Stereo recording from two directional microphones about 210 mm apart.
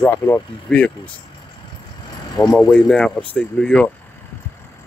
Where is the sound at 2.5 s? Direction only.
5° left (ahead or behind).